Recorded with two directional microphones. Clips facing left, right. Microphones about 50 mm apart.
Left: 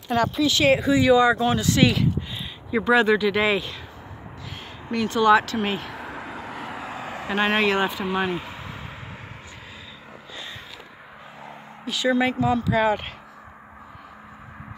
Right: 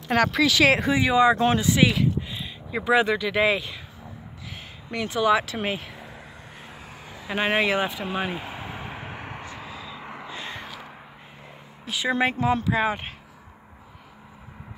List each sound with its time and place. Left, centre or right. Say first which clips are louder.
0.1 s speech: right 1 dB; right
0.9 s speech: left 2 dB; right
1.6 s speech: left 1 dB; centre
4.9 s speech: left 4 dB; centre
5.9 s vehicle: left 8 dB; left
7.3 s speech: left 2 dB; centre
8.5 s a sound: right 2 dB; right
9.0 s vehicle: right 4 dB; right
10.2 s crow: right 1 dB; right
11.9 s speech: left 2 dB; right
12.8 s speech: left 4 dB; centre